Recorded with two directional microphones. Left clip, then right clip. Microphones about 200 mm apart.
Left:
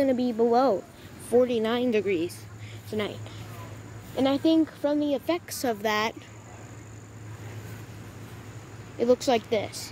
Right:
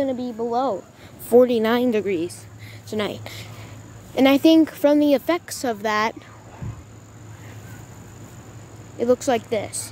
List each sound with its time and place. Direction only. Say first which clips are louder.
0.0 s speech: left 1 dB; 15° left (ahead or behind)
1.3 s a woman's voice: right 7 dB; 30° right (ahead or behind)
1.9 s speech: right 3 dB; 15° right (ahead or behind)
2.9 s speech: right 5 dB; 30° right (ahead or behind)
4.1 s speech: right 8 dB; 45° right (ahead or behind)
5.5 s speech: right 4 dB; 15° right (ahead or behind)
8.9 s speech: right 3 dB; 10° right (ahead or behind)